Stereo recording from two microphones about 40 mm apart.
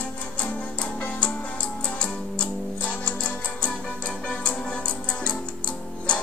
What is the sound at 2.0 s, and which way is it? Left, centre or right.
Music, left.